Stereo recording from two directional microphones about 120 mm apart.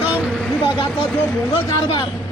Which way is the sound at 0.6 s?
40° left (ahead or behind).